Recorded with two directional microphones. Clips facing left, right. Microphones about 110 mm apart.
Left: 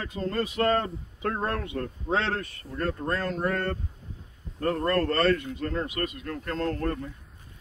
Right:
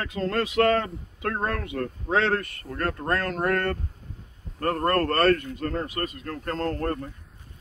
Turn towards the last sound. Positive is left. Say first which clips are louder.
# right 1 dB
turn(degrees=-45)  # may be behind; listen again after turning